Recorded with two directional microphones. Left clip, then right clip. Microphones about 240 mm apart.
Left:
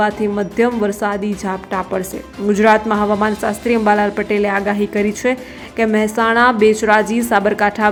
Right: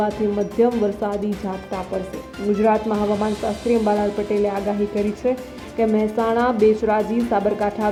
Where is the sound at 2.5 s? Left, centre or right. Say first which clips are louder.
Left 7 dB; left.